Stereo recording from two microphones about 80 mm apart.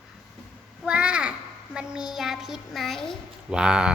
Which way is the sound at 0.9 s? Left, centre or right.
Centre.